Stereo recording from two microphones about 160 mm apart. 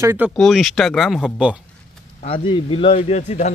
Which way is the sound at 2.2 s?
35° left (ahead or behind).